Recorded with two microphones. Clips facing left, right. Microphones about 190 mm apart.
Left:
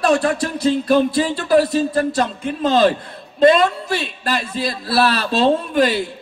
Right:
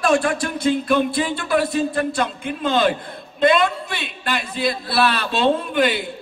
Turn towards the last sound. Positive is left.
turn(degrees=40)  # may be behind; listen again after turning